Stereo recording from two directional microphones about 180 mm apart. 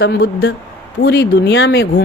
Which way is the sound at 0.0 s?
70° left (ahead or behind).